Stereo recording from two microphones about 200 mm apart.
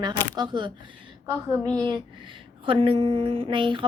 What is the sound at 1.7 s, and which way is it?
A woman's voice, 20° right (ahead or behind).